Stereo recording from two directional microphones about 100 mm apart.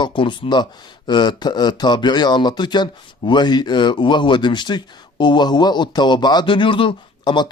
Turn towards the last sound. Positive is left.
turn(degrees=50)  # may be behind; listen again after turning